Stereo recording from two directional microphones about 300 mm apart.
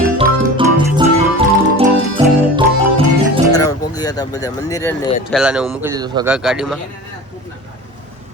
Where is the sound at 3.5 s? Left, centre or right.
Centre.